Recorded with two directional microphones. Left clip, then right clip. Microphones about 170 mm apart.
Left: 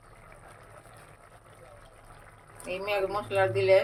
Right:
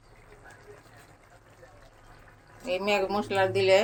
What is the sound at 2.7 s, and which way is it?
Speech, 55° right (ahead or behind).